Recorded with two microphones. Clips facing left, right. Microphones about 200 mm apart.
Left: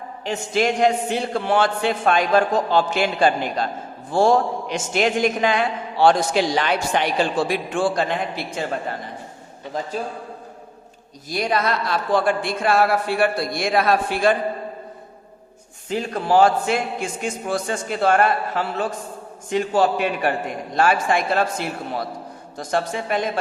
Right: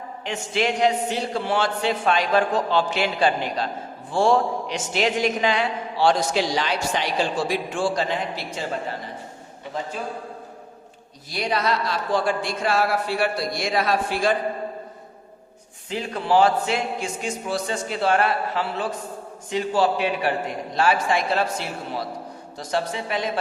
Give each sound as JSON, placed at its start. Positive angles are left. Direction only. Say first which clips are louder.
{"t": 0.3, "sound": "a man's voice", "louder": "left 3 dB", "side_deg": 45}
{"t": 11.3, "sound": "a man's voice", "louder": "left 2 dB", "side_deg": 50}
{"t": 15.9, "sound": "a man's voice", "louder": "left 2 dB", "side_deg": 45}